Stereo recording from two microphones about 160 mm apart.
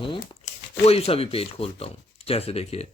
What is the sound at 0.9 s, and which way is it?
Speech, 40° left (ahead or behind).